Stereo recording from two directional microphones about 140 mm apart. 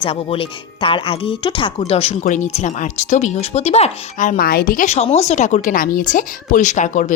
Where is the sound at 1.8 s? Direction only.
45° left (ahead or behind).